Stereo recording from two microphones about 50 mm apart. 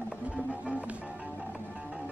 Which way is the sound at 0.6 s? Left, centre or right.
Right.